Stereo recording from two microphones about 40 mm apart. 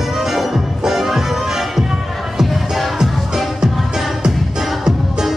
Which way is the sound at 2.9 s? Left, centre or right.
Centre.